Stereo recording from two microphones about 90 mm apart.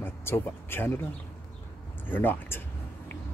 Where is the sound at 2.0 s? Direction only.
20° left (ahead or behind).